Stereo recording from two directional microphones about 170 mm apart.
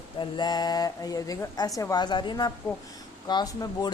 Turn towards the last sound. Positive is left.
turn(degrees=20)  # may be behind; listen again after turning